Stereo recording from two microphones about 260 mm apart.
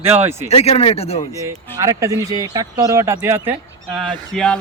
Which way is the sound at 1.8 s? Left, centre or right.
Centre.